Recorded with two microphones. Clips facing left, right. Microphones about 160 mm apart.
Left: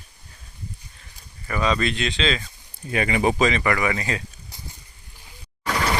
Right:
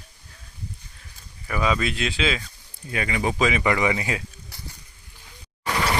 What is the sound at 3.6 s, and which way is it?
Speech, 20° right (ahead or behind).